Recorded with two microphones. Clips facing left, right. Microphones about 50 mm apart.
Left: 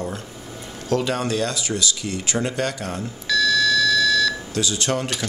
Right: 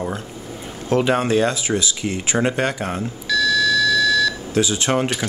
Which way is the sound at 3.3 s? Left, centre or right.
Centre.